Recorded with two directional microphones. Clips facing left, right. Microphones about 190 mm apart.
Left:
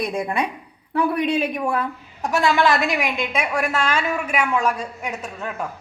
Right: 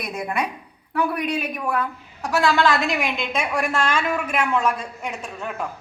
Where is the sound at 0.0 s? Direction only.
30° left (ahead or behind).